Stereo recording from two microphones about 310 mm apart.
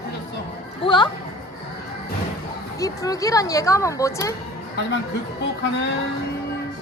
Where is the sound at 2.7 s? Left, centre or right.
Centre.